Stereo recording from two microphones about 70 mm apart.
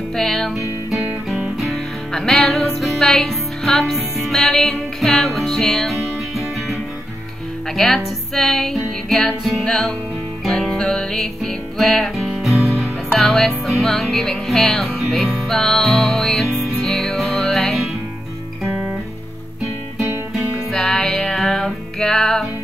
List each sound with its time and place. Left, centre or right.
0.1 s music: centre
1.6 s music: centre
18.7 s guitar: right
20.7 s music: centre